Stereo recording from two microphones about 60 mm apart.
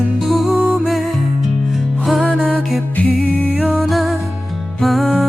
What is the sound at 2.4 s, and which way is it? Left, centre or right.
Music, right.